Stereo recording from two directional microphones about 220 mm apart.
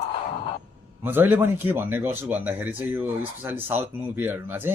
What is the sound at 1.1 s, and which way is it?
A man's voice, 10° right (ahead or behind).